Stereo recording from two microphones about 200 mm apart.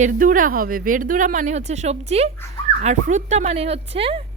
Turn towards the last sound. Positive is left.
turn(degrees=-30)  # may be behind; listen again after turning